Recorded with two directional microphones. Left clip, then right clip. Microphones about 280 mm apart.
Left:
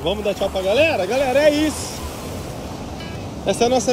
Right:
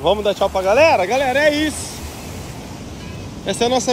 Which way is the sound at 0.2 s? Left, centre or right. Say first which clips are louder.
Right 4 dB; centre.